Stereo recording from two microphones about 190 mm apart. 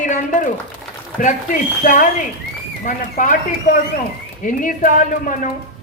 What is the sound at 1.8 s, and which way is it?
A man's voice, 45° left (ahead or behind).